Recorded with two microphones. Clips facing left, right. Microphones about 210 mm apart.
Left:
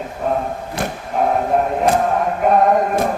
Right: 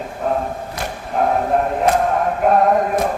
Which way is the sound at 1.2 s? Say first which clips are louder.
Even; centre (ahead or behind).